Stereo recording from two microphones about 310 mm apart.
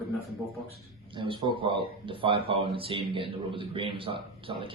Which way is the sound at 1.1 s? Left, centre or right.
Centre.